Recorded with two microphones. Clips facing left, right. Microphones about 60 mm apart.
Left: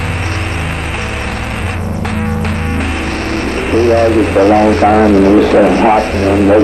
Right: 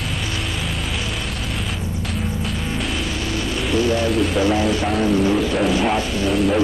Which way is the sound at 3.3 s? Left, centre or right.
Left.